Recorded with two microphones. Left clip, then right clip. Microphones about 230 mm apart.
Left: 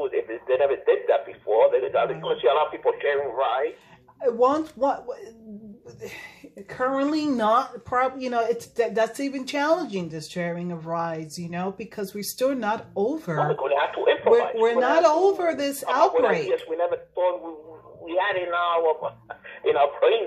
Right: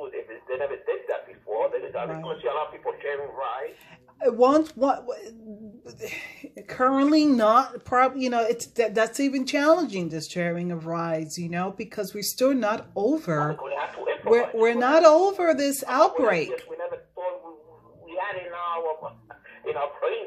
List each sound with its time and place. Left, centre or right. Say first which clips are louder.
0.0 s radio: left 9 dB; left
4.2 s speech: right 2 dB; right
13.6 s speech: left 8 dB; left
14.3 s speech: right 4 dB; right
16.4 s a sound: left 8 dB; left
19.6 s radio: left 8 dB; left